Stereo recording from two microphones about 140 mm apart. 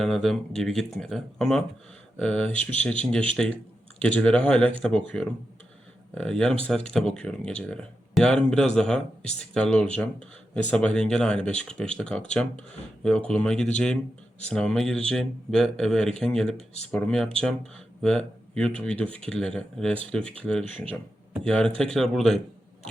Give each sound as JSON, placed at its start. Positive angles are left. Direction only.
{"t": 0.0, "sound": "speech", "side_deg": 0}
{"t": 16.6, "sound": "speech", "side_deg": 50}
{"t": 16.9, "sound": "speech", "side_deg": 5}